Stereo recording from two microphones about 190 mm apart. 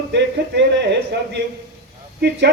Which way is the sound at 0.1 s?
65° right (ahead or behind).